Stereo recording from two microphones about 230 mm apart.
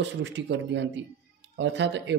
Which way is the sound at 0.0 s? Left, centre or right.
Right.